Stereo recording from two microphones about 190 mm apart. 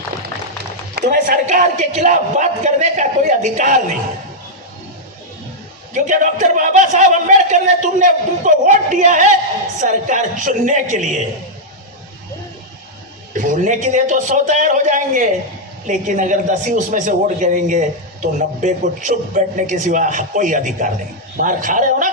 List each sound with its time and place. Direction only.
0.9 s a man's voice: 50° right (ahead or behind)
5.9 s a man's voice: 40° right (ahead or behind)
13.3 s a man's voice: 45° right (ahead or behind)